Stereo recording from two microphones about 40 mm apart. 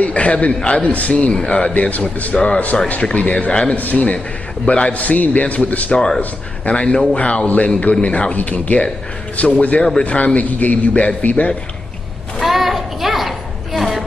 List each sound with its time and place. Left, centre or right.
0.0 s a man's voice: left
1.7 s a man's voice: left
2.3 s a man's voice: left
3.7 s a man's voice: left
5.9 s speech: centre
6.6 s a man's voice: left
12.4 s a sound: centre